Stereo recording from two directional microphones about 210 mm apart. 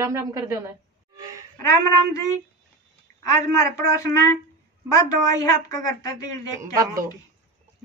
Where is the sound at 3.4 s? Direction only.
15° left (ahead or behind).